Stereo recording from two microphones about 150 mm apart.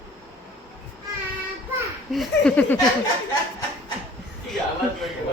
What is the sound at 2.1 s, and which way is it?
Speech, 5° left (ahead or behind).